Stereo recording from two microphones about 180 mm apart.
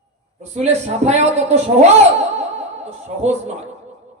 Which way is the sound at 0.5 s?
40° right (ahead or behind).